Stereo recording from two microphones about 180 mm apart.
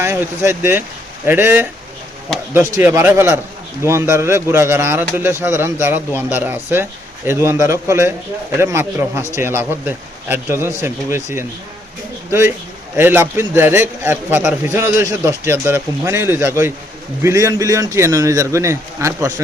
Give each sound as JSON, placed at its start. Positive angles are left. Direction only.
{"t": 0.0, "sound": "a man's voice", "side_deg": -15}